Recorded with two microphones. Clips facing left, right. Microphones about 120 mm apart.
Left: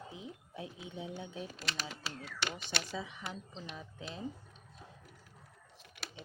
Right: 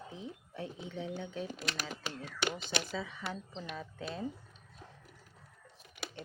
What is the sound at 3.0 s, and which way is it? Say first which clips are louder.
Speech: right 3 dB; 15° left (ahead or behind).